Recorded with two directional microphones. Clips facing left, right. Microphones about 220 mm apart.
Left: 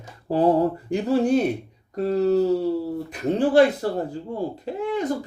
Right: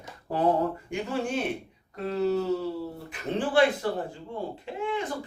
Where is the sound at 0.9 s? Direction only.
35° left (ahead or behind).